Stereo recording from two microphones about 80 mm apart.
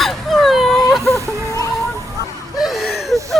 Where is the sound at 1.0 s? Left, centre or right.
Left.